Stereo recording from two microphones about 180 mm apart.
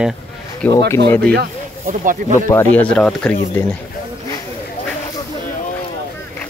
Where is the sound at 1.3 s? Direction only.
55° right (ahead or behind).